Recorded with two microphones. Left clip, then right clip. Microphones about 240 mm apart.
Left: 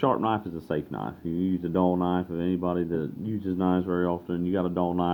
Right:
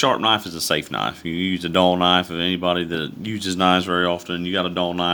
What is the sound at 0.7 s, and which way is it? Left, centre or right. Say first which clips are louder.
Speech: right 8 dB; right.